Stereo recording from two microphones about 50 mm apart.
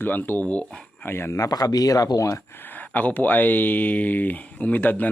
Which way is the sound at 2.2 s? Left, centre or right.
Left.